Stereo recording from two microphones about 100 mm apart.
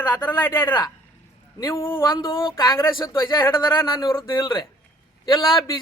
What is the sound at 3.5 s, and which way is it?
A woman's voice, 45° left (ahead or behind).